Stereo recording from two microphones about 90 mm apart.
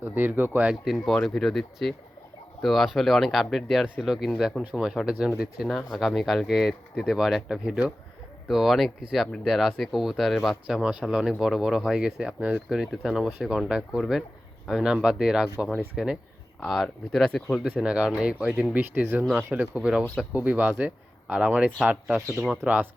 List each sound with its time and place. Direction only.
0.0 s speech: 20° right (ahead or behind)
0.9 s speech: centre (ahead or behind)
17.6 s speech: 10° right (ahead or behind)